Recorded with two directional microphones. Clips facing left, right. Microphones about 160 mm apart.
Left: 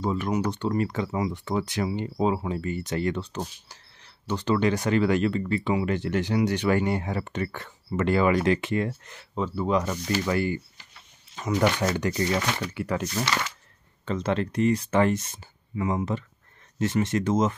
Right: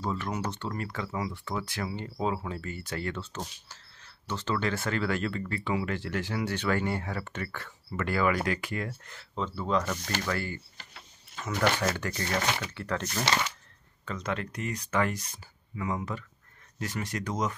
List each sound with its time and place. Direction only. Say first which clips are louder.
0.0 s speech: left 6 dB; 15° left (ahead or behind)
14.0 s speech: left 7 dB; 30° left (ahead or behind)